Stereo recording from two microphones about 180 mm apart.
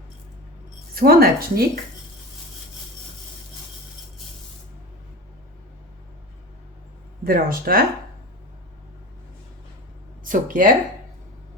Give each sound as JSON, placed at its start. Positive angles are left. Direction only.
{"t": 0.9, "sound": "speech", "side_deg": -55}
{"t": 7.3, "sound": "speech", "side_deg": -55}
{"t": 10.2, "sound": "speech", "side_deg": -50}